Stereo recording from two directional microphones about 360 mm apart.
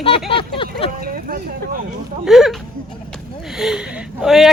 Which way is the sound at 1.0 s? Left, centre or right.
Right.